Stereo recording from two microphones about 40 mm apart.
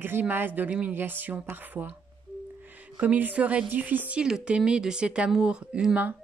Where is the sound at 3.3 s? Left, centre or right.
Right.